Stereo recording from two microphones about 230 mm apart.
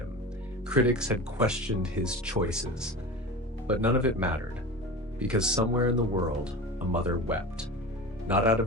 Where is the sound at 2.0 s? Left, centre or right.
Centre.